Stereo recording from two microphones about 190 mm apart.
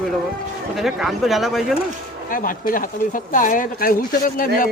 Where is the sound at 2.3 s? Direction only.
45° left (ahead or behind).